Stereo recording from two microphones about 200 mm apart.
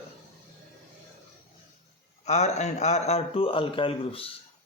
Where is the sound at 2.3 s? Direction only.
35° left (ahead or behind).